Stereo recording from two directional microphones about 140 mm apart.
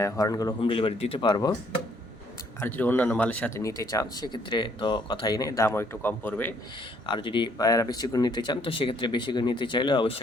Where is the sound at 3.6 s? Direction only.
25° left (ahead or behind).